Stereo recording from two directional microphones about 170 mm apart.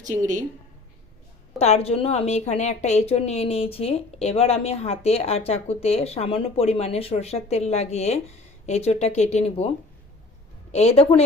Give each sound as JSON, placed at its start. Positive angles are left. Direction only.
{"t": 0.0, "sound": "a woman's voice", "side_deg": -45}
{"t": 1.5, "sound": "a woman's voice", "side_deg": 40}